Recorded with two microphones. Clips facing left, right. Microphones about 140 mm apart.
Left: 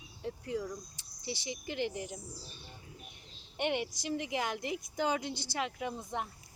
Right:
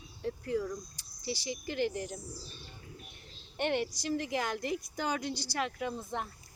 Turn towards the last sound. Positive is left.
turn(degrees=15)  # may be behind; listen again after turning